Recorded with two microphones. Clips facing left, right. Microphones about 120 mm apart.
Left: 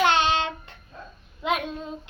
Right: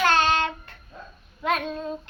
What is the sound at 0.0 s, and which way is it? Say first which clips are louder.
Child singing: even; 20° left (ahead or behind).